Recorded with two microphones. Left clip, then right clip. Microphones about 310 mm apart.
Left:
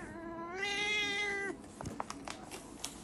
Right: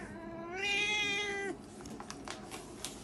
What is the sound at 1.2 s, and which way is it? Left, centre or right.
Cat, centre.